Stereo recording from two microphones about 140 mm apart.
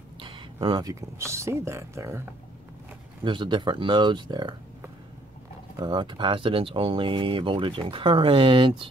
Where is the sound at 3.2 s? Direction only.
35° right (ahead or behind).